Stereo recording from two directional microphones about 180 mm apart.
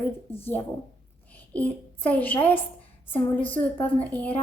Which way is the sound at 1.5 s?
10° left (ahead or behind).